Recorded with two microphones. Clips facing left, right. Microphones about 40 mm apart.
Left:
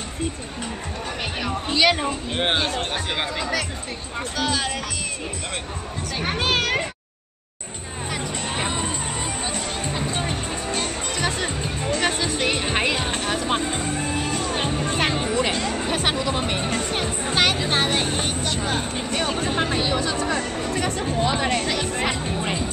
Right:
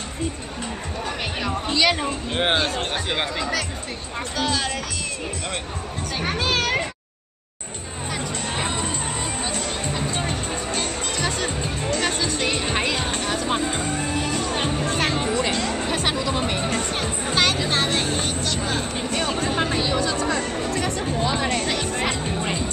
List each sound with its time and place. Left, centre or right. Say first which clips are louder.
1.7 s speech: left 2 dB; centre
6.4 s speech: left 1 dB; left
8.1 s music: even; centre
14.9 s music: even; centre
18.2 s vehicle: even; left
18.9 s music: even; centre
20.4 s music: even; centre